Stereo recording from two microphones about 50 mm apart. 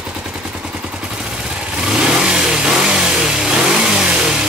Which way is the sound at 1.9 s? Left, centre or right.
Centre.